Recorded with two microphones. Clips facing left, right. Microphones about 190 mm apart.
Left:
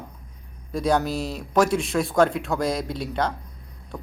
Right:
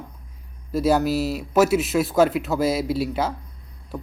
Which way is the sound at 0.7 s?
5° right (ahead or behind).